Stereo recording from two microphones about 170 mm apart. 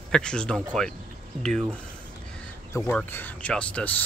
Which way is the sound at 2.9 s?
10° left (ahead or behind).